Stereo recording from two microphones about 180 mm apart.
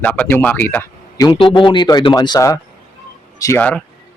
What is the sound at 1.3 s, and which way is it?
Speech, 30° left (ahead or behind).